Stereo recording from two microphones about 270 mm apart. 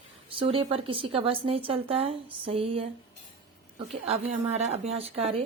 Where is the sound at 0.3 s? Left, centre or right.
Centre.